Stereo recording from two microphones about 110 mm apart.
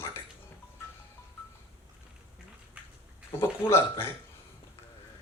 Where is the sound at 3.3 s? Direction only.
20° left (ahead or behind).